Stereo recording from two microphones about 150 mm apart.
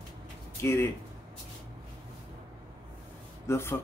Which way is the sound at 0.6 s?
15° left (ahead or behind).